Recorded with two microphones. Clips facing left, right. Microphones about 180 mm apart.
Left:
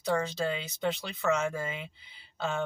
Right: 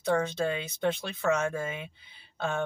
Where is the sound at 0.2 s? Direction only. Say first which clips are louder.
Right 2 dB; 55° right (ahead or behind).